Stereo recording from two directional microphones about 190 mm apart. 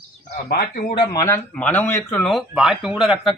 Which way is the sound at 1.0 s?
20° left (ahead or behind).